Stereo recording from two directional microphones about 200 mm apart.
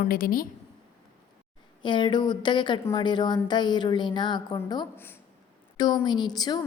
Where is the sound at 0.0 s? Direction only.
45° left (ahead or behind).